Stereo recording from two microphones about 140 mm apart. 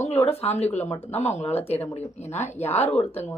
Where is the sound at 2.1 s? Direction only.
55° left (ahead or behind).